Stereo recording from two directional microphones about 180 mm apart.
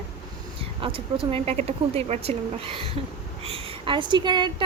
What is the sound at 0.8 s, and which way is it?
A woman's voice, 30° right (ahead or behind).